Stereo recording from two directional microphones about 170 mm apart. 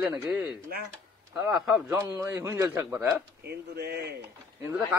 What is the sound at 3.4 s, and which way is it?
Speech, 70° right (ahead or behind).